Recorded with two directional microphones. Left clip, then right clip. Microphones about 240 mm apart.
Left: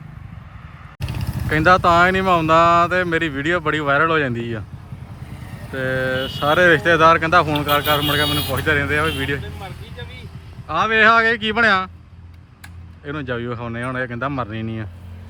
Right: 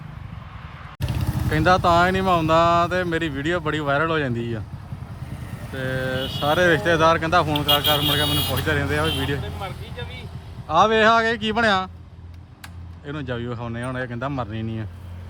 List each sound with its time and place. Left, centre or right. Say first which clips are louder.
0.9 s vehicle: even; right
1.5 s speech: left 4 dB; centre
9.0 s vehicle: left 3 dB; centre
10.7 s speech: left 2 dB; centre
13.1 s speech: left 4 dB; centre